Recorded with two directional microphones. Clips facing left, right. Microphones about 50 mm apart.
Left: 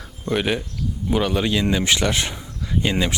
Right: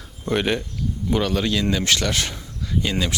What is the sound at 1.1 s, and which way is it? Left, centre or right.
Speech, centre.